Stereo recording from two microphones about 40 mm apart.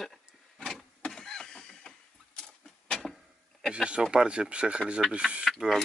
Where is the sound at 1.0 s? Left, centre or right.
Centre.